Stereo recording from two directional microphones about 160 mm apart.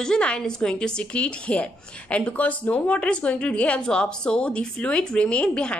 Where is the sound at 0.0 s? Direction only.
5° left (ahead or behind).